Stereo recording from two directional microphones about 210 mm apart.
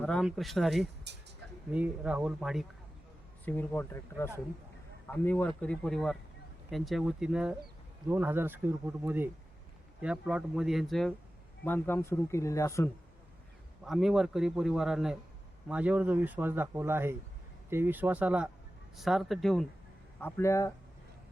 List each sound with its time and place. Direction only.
0.0 s a man's voice: centre (ahead or behind)
1.1 s speech: 55° right (ahead or behind)
1.7 s a man's voice: 5° right (ahead or behind); by 12.9 s 15° left (ahead or behind)
13.8 s a man's voice: centre (ahead or behind)
20.2 s speech: 15° left (ahead or behind)